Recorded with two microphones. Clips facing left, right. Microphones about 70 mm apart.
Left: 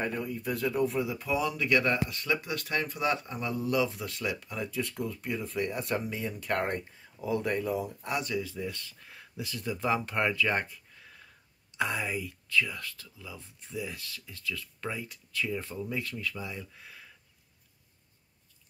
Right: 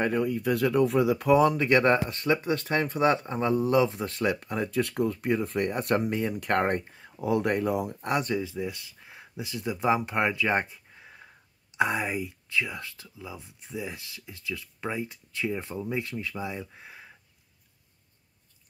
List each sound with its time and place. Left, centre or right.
0.0 s speech: right
8.4 s speech: centre